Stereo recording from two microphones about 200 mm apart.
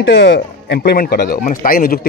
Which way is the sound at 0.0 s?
65° left (ahead or behind).